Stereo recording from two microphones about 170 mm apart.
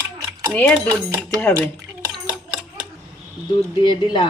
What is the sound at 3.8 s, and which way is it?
Speech, 30° left (ahead or behind).